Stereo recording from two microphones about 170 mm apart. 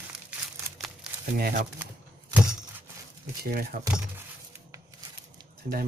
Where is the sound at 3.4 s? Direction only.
65° right (ahead or behind).